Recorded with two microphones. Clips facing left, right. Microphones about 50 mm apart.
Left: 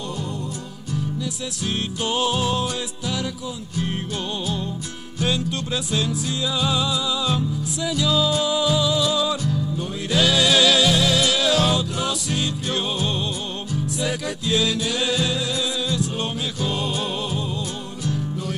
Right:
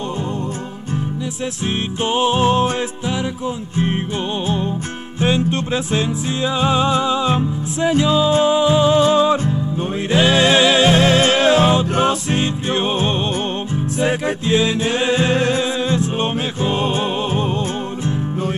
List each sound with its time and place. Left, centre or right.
2.0 s music: right
5.2 s music: right